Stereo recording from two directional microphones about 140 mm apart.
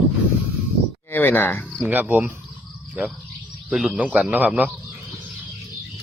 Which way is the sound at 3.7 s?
5° right (ahead or behind).